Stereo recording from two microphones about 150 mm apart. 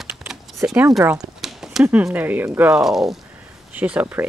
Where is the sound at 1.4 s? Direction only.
Centre (ahead or behind).